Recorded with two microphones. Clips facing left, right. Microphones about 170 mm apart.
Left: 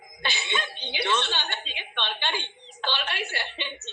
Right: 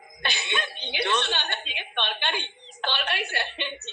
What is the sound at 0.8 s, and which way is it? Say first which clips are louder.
A woman's voice: right 1 dB; 55° right (ahead or behind).